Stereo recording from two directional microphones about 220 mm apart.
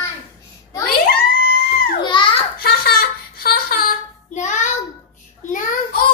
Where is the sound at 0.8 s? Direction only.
45° left (ahead or behind).